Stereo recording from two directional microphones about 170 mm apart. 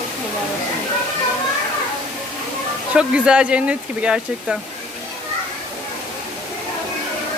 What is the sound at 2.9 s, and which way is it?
Speech, 5° right (ahead or behind).